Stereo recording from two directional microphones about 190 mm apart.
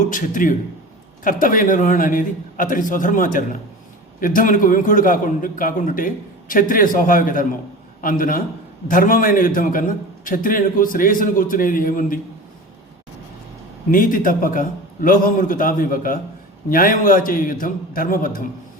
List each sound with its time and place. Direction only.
0.1 s a man's voice: 45° left (ahead or behind)
13.9 s a man's voice: 45° left (ahead or behind)